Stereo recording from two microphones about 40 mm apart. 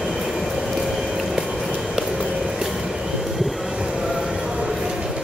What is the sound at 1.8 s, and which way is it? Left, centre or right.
Train, centre.